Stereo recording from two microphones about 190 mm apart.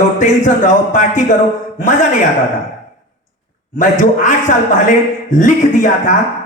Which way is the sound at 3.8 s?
40° left (ahead or behind).